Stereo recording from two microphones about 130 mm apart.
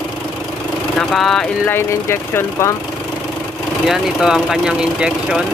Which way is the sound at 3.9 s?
5° right (ahead or behind).